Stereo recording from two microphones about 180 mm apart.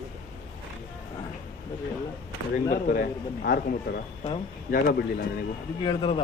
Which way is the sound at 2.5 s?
50° left (ahead or behind).